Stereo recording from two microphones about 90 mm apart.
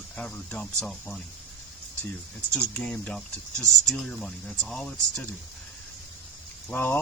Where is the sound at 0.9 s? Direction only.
Centre (ahead or behind).